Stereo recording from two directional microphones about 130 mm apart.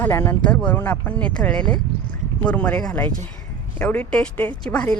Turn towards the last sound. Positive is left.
turn(degrees=10)  # may be behind; listen again after turning